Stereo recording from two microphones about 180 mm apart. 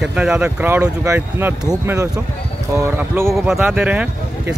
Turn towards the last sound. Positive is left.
turn(degrees=-10)  # may be behind; listen again after turning